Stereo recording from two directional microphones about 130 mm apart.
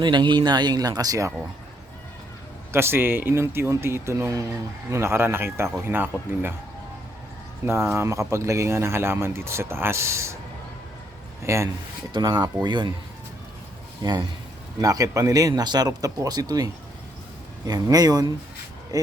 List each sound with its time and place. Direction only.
0.0 s speech: 35° right (ahead or behind)
2.7 s speech: 20° right (ahead or behind)
7.6 s speech: 20° right (ahead or behind)
11.4 s speech: 20° right (ahead or behind)
12.1 s speech: 35° right (ahead or behind)
14.0 s speech: 35° right (ahead or behind)
17.7 s speech: 30° right (ahead or behind)